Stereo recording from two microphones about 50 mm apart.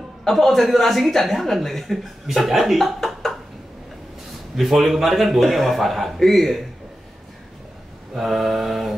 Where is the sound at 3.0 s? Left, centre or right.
Centre.